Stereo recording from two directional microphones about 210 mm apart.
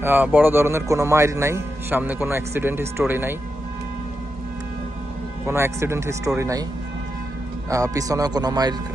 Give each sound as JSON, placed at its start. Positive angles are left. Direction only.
{"t": 0.0, "sound": "a man's voice", "side_deg": -10}
{"t": 5.5, "sound": "a man's voice", "side_deg": -10}
{"t": 7.7, "sound": "a man's voice", "side_deg": -15}